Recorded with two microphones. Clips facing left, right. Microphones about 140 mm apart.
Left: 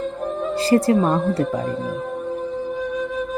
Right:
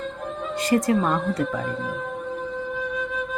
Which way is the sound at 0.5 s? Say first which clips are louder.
Left 4 dB; 30° left (ahead or behind).